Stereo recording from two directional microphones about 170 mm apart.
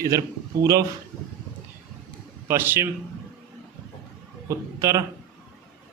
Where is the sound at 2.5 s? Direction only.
15° right (ahead or behind).